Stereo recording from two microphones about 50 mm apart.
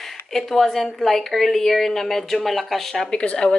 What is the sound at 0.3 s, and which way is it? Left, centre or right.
A woman's voice, centre.